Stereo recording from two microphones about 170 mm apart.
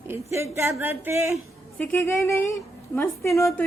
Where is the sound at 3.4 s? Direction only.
15° left (ahead or behind).